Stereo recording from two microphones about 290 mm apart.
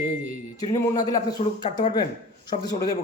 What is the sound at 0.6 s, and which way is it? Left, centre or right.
A man's voice, centre.